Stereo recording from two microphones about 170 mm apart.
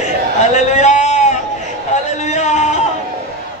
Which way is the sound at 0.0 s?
45° left (ahead or behind).